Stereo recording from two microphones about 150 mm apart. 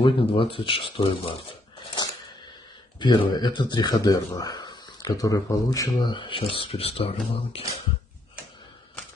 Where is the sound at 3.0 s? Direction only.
30° left (ahead or behind).